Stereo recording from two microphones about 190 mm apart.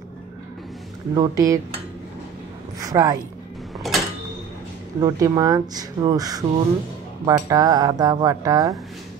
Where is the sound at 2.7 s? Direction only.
20° right (ahead or behind).